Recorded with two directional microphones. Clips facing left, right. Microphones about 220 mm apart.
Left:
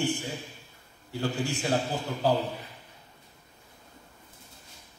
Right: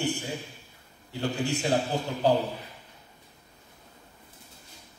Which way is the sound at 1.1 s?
20° right (ahead or behind).